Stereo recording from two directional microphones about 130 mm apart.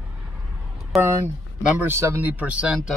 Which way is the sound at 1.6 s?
15° right (ahead or behind).